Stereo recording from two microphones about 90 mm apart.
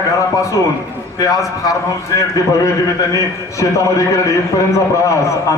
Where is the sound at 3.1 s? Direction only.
35° left (ahead or behind).